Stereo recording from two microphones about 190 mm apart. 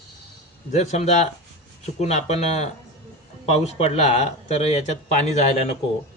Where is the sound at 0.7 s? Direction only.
35° left (ahead or behind).